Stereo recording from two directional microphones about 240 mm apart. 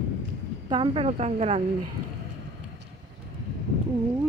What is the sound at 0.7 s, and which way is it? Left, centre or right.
Speech, right.